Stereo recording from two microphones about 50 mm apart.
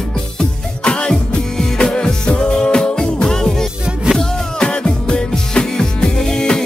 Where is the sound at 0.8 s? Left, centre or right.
Centre.